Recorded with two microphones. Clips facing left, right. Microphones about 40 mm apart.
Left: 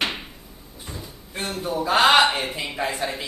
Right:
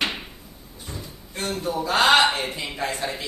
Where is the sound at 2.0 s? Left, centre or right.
Centre.